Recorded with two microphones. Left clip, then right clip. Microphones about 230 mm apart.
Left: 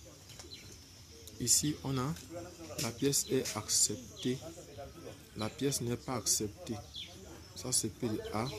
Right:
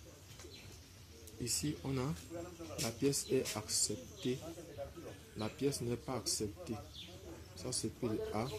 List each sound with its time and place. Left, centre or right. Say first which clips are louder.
1.4 s a man's voice: left 7 dB; centre
5.4 s a man's voice: left 2 dB; centre
7.5 s a man's voice: left 5 dB; centre